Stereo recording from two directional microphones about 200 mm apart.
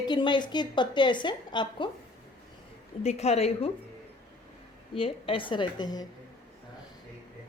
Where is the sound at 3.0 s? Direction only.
30° left (ahead or behind).